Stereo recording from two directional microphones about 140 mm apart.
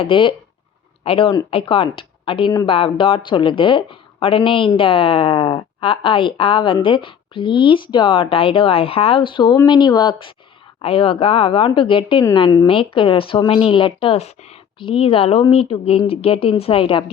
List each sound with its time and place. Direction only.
0.0 s a woman's voice: 35° left (ahead or behind)